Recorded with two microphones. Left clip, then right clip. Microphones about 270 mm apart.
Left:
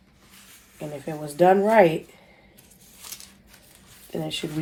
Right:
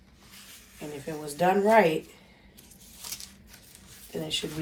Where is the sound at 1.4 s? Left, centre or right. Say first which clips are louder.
Left 4 dB; left.